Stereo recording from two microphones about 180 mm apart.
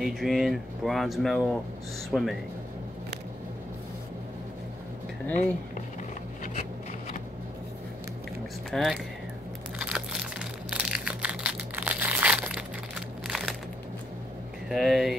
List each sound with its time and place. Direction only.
0.0 s speech: centre (ahead or behind)
5.3 s speech: 40° left (ahead or behind)
8.6 s speech: centre (ahead or behind)
9.8 s crushing: 5° right (ahead or behind)
14.7 s speech: centre (ahead or behind)